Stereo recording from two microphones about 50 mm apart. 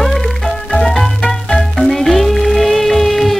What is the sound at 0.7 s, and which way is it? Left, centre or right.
Music, centre.